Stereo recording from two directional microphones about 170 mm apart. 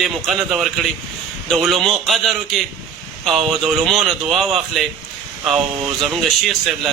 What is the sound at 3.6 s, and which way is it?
A man's voice, centre (ahead or behind).